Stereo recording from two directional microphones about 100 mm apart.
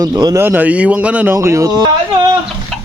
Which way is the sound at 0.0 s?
40° right (ahead or behind).